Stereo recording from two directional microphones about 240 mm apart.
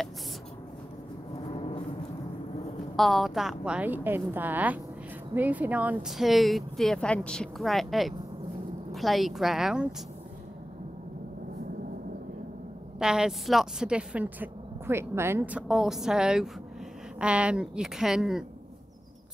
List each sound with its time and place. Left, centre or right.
3.0 s a woman's voice: centre
13.0 s speech: centre